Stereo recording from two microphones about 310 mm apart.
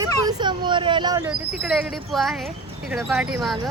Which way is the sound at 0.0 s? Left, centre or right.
Centre.